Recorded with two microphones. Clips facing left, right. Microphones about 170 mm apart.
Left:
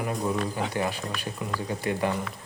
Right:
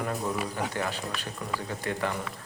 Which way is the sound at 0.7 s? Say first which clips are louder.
Left 3 dB; 15° left (ahead or behind).